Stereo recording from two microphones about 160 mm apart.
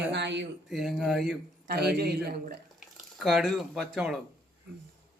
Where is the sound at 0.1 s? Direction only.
90° right.